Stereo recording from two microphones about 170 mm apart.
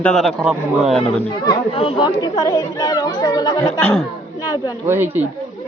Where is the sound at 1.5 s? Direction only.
25° left (ahead or behind).